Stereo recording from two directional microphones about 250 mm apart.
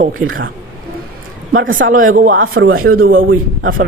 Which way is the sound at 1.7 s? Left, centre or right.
Right.